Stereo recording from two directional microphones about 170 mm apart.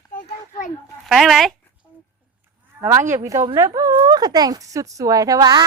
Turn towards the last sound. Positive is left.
turn(degrees=-20)  # may be behind; listen again after turning